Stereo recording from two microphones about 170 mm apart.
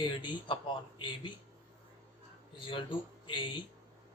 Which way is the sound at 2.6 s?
30° left (ahead or behind).